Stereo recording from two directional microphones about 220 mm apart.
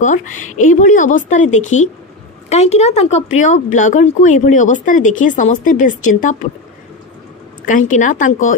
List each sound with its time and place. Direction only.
0.0 s speech: 35° left (ahead or behind)
7.6 s speech: 35° left (ahead or behind)